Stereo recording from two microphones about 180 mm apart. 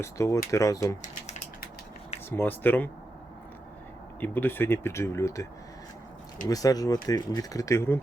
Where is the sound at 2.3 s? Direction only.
10° left (ahead or behind).